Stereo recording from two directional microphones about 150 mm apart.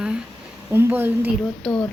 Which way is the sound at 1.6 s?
5° left (ahead or behind).